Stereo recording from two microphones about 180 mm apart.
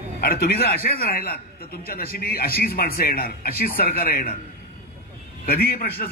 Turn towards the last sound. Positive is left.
turn(degrees=55)  # may be behind; listen again after turning